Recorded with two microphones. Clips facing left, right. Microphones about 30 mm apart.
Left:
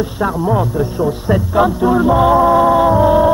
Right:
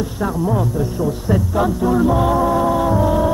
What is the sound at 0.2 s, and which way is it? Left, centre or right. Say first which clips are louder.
Music: left 3 dB; left.